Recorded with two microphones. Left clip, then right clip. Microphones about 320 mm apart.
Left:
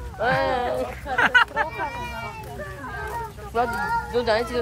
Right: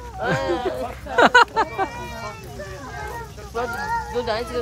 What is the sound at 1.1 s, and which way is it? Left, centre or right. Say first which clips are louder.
Speech: right 4 dB; centre.